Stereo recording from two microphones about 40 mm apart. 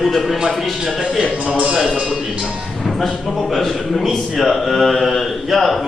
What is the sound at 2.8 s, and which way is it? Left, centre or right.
A man's voice, centre.